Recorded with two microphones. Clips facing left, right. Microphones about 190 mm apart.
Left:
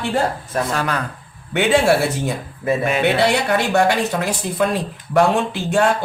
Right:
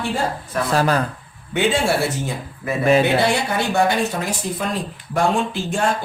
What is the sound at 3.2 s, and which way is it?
Speech, 65° left (ahead or behind).